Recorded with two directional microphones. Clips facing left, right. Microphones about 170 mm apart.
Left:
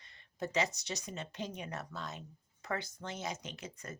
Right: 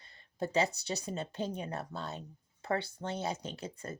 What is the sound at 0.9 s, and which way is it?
Speech, 30° right (ahead or behind).